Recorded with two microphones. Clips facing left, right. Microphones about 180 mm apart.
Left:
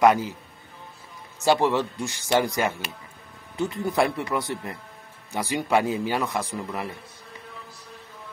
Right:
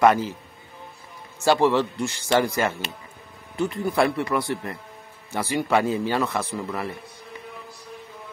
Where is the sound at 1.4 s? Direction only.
15° left (ahead or behind).